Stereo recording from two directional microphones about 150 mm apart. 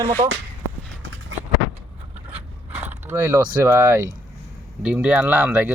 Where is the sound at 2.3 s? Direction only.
10° right (ahead or behind).